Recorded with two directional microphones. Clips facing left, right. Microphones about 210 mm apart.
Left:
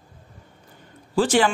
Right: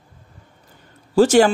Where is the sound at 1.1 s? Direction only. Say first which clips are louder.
Right 6 dB; 45° right (ahead or behind).